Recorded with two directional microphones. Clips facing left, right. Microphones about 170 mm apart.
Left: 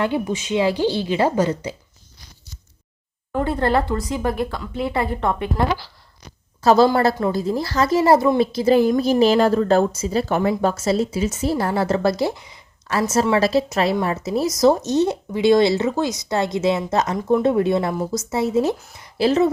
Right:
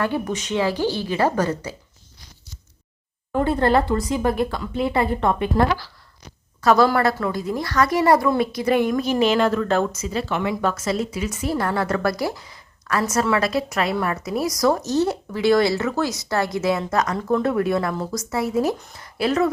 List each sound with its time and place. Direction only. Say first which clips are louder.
0.0 s a woman's voice: left 2 dB; 15° left (ahead or behind)
3.4 s speech: right 1 dB; 25° right (ahead or behind)
6.6 s a woman's voice: left 2 dB; 25° left (ahead or behind)
10.5 s a woman's voice: left 3 dB; 30° left (ahead or behind)